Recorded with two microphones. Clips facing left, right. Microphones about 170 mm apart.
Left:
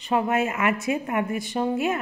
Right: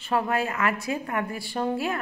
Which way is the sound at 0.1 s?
20° left (ahead or behind).